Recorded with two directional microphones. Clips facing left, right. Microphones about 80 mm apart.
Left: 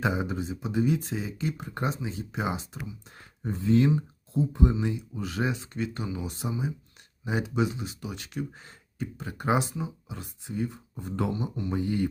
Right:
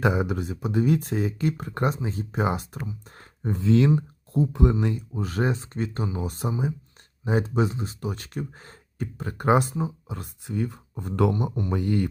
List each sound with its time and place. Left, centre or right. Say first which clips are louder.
0.0 s speech: right 4 dB; right
2.0 s speech: right 5 dB; right
3.6 s speech: right 2 dB; right
5.1 s speech: right 4 dB; right
10.4 s speech: right 2 dB; right
11.8 s speech: right 3 dB; right